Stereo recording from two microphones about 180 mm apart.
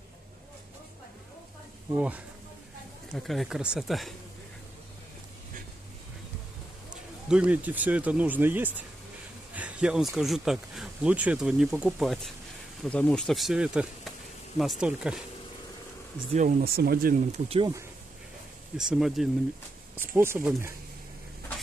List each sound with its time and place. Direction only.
2.0 s speech: 10° right (ahead or behind)
6.9 s speech: 5° right (ahead or behind)
9.6 s a sound: 5° right (ahead or behind)
10.1 s speech: centre (ahead or behind)
16.3 s speech: 45° right (ahead or behind)
17.5 s speech: 30° right (ahead or behind)
18.8 s speech: 5° right (ahead or behind)
20.0 s speech: 15° right (ahead or behind)